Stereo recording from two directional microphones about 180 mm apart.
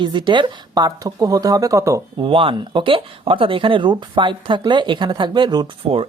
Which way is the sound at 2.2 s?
30° right (ahead or behind).